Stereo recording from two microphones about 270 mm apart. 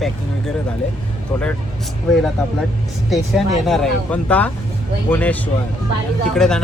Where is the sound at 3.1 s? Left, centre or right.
Centre.